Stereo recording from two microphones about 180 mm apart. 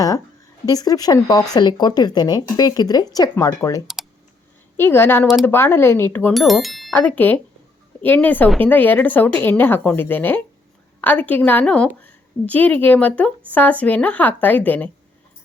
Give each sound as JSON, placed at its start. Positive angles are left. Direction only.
{"t": 0.6, "sound": "a woman's voice", "side_deg": 20}
{"t": 6.3, "sound": "speech", "side_deg": 0}
{"t": 6.9, "sound": "a woman's voice", "side_deg": 10}